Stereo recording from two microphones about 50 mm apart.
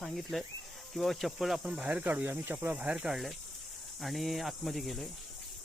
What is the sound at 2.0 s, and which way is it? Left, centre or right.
Speech, right.